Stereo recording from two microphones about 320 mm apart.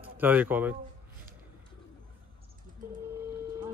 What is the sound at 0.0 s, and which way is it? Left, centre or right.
Speech, centre.